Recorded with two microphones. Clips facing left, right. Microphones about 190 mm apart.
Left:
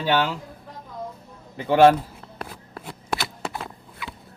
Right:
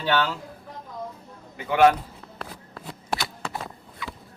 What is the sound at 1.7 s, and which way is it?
Speech, 30° left (ahead or behind).